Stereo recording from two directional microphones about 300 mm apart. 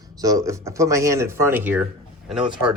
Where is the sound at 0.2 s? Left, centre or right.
Centre.